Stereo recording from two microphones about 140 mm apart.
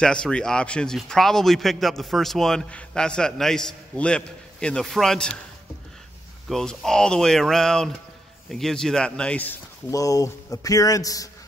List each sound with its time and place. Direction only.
0.0 s a man's voice: 5° left (ahead or behind)
6.5 s a man's voice: 5° left (ahead or behind)
9.8 s speech: 25° left (ahead or behind)